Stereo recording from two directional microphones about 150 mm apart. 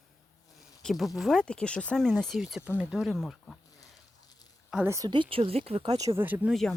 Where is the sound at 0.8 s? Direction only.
Centre (ahead or behind).